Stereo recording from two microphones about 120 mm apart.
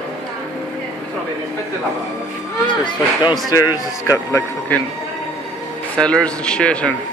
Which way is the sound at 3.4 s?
30° left (ahead or behind).